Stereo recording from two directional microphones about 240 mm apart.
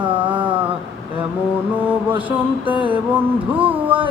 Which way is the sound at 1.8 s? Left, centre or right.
Centre.